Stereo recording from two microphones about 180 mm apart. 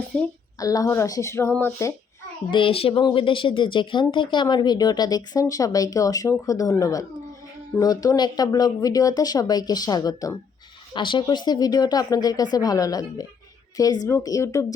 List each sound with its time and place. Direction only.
0.1 s a woman's voice: 5° left (ahead or behind)
0.6 s speech: 20° left (ahead or behind)
2.5 s speech: 30° left (ahead or behind)